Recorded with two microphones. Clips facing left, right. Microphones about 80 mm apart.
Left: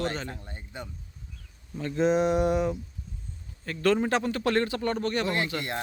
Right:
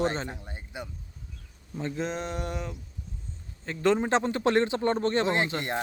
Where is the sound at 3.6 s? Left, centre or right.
Right.